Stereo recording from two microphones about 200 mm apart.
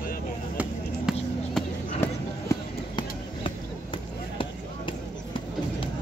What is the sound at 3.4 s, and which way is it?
Basketball bounce, 25° left (ahead or behind).